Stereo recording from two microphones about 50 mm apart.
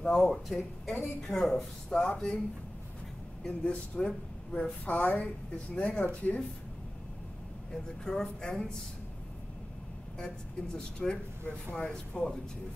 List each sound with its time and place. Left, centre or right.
0.0 s speech: centre
3.4 s a woman's voice: left
7.7 s speech: centre
10.1 s speech: centre